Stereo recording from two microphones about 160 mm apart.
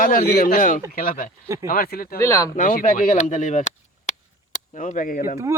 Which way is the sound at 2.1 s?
20° left (ahead or behind).